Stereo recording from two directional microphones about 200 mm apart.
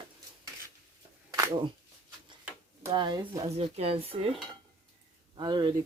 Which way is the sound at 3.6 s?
30° right (ahead or behind).